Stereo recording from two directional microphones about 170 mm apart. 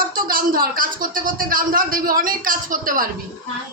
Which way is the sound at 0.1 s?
55° right (ahead or behind).